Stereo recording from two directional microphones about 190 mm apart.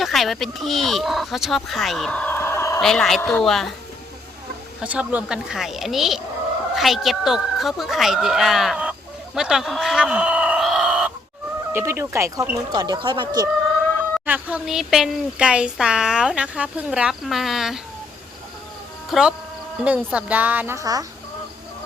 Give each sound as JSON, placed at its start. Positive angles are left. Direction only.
{"t": 0.0, "sound": "speech", "side_deg": 0}
{"t": 2.8, "sound": "speech", "side_deg": 0}
{"t": 4.8, "sound": "speech", "side_deg": -5}
{"t": 14.3, "sound": "speech", "side_deg": -10}
{"t": 19.1, "sound": "a woman's voice", "side_deg": 0}